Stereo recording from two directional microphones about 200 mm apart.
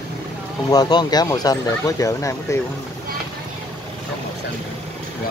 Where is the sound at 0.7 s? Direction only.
20° left (ahead or behind).